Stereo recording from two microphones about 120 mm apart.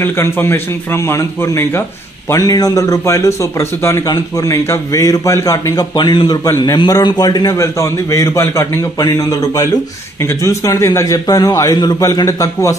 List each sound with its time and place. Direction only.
0.0 s a man's voice: 20° left (ahead or behind)
2.3 s a man's voice: 30° left (ahead or behind)